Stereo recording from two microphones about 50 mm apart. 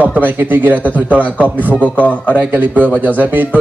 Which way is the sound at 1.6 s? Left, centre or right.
Left.